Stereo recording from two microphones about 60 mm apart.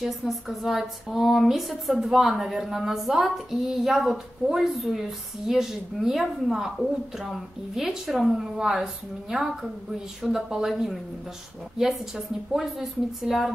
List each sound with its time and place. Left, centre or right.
0.0 s speech: centre
12.5 s speech: centre